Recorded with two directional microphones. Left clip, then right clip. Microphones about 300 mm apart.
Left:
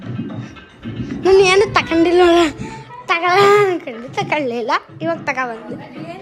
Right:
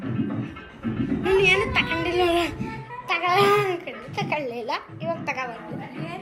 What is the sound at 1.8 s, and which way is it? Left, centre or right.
Speech, left.